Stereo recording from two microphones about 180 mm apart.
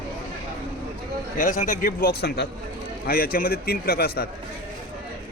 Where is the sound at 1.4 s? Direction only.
45° left (ahead or behind).